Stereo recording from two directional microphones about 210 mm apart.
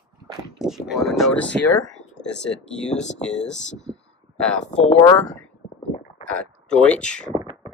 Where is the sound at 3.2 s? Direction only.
5° left (ahead or behind).